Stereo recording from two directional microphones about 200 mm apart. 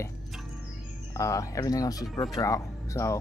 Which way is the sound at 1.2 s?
15° left (ahead or behind).